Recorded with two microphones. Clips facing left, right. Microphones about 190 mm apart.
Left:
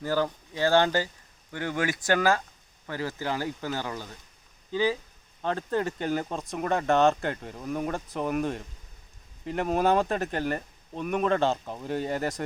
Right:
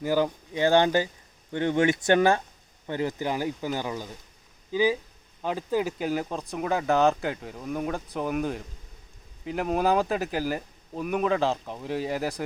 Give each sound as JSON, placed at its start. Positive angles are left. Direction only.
{"t": 0.0, "sound": "speech", "side_deg": -15}